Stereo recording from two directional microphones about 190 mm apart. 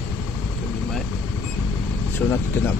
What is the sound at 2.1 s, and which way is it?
Speech, 10° left (ahead or behind).